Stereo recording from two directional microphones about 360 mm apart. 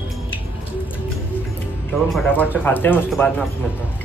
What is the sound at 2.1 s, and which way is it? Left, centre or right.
Speech, centre.